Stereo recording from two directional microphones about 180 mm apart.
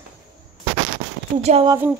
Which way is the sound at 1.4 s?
35° right (ahead or behind).